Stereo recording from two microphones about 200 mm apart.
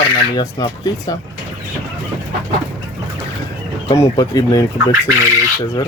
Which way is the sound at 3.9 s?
20° left (ahead or behind).